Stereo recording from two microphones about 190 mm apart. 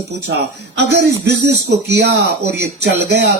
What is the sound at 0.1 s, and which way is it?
Speech, 60° right (ahead or behind).